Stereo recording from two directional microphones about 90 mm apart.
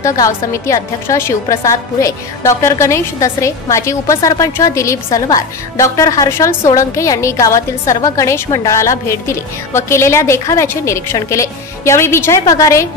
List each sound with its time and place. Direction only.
0.0 s a woman's voice: 35° left (ahead or behind)